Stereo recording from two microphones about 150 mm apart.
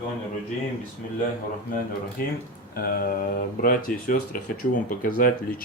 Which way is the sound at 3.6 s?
70° left (ahead or behind).